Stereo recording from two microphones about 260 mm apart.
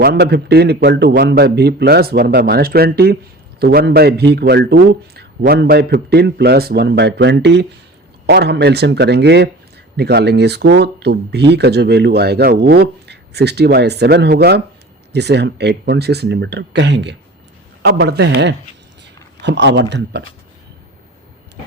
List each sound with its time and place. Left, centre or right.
0.0 s speech: right